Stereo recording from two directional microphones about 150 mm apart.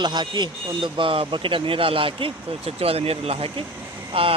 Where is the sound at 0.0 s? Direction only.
30° right (ahead or behind).